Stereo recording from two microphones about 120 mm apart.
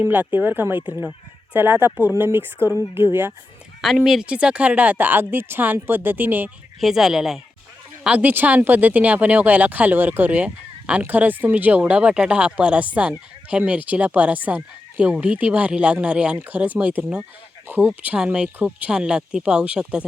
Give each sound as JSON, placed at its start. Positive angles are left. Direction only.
{"t": 0.0, "sound": "speech", "side_deg": -15}
{"t": 3.8, "sound": "speech", "side_deg": 0}
{"t": 6.7, "sound": "speech", "side_deg": 0}